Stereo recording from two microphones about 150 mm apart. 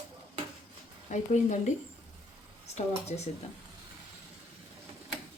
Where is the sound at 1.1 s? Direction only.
50° left (ahead or behind).